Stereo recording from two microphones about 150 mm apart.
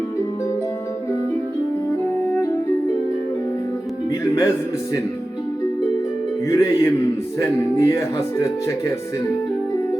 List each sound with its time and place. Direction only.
6.5 s speech: 20° left (ahead or behind)